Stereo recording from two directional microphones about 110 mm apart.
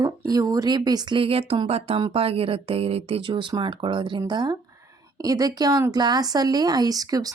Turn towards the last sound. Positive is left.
turn(degrees=-35)  # may be behind; listen again after turning